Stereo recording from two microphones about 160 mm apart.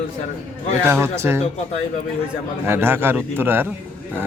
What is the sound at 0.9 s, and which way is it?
Speech, 15° right (ahead or behind).